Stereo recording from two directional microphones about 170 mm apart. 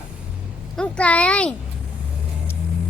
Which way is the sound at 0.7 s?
5° left (ahead or behind).